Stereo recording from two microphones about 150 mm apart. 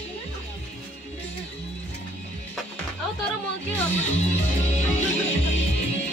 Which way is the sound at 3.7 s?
45° left (ahead or behind).